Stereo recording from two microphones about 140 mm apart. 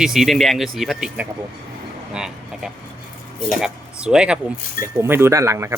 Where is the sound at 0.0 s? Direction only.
Centre (ahead or behind).